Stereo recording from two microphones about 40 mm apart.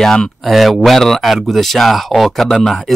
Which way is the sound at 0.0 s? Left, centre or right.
Centre.